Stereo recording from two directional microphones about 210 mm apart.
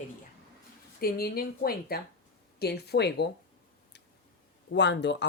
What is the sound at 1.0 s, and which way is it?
Speech, 45° left (ahead or behind).